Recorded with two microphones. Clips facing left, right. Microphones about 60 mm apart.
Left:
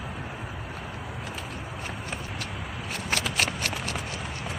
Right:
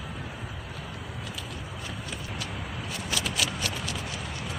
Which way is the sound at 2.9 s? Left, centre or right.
Left.